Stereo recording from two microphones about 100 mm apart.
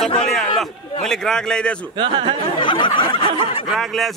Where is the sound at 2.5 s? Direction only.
55° left (ahead or behind).